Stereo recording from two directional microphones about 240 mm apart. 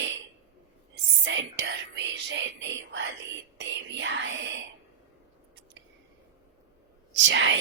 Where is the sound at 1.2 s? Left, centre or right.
Right.